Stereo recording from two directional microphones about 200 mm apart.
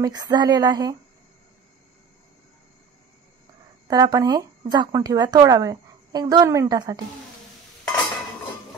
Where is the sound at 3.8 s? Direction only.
20° right (ahead or behind).